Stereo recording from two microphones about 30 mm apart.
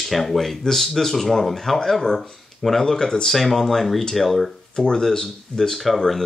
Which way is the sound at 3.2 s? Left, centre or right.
Centre.